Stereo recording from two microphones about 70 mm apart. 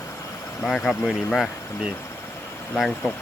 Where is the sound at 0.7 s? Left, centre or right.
Centre.